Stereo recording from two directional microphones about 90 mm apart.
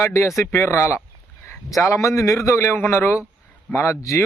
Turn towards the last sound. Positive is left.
turn(degrees=35)  # may be behind; listen again after turning